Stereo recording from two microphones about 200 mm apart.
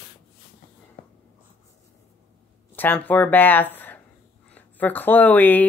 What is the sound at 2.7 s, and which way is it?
Speech, 10° left (ahead or behind).